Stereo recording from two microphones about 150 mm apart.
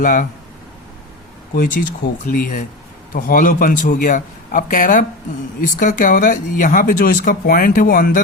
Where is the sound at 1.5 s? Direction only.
65° left (ahead or behind).